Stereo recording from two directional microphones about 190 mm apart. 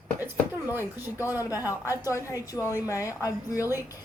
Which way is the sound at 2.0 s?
15° left (ahead or behind).